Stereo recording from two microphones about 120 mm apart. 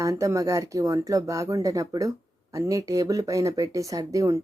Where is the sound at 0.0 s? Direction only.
25° right (ahead or behind).